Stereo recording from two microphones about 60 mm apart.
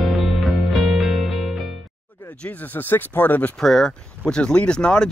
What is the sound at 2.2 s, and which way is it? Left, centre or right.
Speech, left.